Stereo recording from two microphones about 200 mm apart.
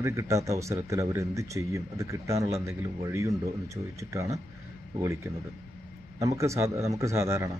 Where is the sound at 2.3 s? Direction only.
30° right (ahead or behind).